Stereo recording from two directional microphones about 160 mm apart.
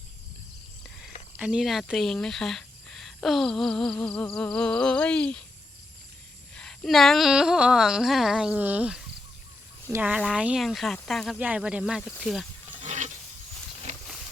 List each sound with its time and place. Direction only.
1.4 s speech: 5° right (ahead or behind)
6.6 s speech: centre (ahead or behind)
11.3 s speech: 10° right (ahead or behind)
12.8 s a sound: 50° right (ahead or behind)